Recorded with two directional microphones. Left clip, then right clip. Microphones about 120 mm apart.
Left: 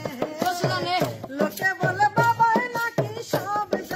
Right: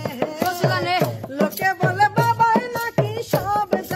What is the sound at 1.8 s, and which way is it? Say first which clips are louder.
Music: right 2 dB; 30° right (ahead or behind).